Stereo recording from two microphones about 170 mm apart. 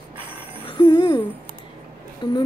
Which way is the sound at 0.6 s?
25° left (ahead or behind).